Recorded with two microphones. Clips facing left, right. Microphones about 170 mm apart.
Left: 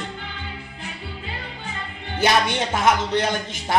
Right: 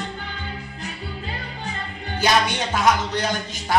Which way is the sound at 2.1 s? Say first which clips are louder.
Left 1 dB; 25° left (ahead or behind).